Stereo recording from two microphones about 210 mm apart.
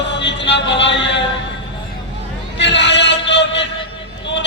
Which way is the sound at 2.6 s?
55° left (ahead or behind).